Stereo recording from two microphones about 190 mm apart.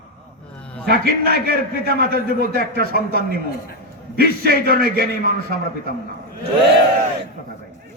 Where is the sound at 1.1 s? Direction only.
55° right (ahead or behind).